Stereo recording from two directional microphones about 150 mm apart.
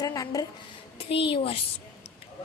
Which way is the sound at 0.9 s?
40° left (ahead or behind).